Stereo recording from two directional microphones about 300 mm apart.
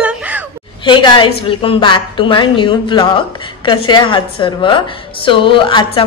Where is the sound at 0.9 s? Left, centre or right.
Centre.